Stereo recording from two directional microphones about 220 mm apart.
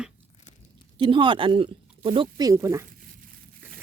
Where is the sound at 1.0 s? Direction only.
20° right (ahead or behind).